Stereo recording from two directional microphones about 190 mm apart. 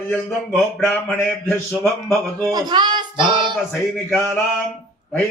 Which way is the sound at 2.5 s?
20° right (ahead or behind).